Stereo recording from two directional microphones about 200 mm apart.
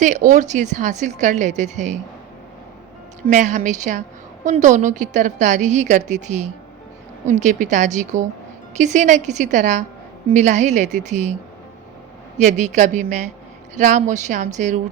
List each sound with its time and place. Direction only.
0.0 s a woman's voice: 40° right (ahead or behind)
3.2 s a woman's voice: 40° right (ahead or behind)
12.4 s a woman's voice: 35° right (ahead or behind)